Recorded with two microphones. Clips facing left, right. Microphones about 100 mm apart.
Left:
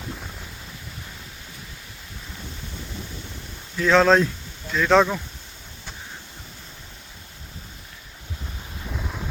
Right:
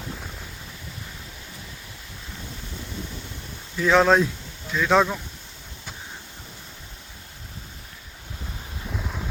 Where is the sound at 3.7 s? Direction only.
10° right (ahead or behind).